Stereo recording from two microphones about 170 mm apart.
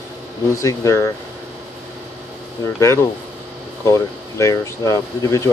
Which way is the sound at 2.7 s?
15° left (ahead or behind).